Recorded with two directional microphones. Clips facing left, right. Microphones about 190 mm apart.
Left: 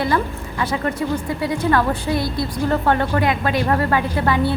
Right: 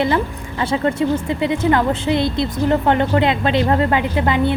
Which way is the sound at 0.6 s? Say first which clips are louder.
Right 4 dB; 25° right (ahead or behind).